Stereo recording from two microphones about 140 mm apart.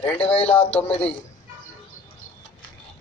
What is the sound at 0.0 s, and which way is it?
Speech, 10° left (ahead or behind).